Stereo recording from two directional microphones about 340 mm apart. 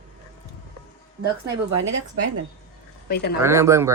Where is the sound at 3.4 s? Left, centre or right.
Centre.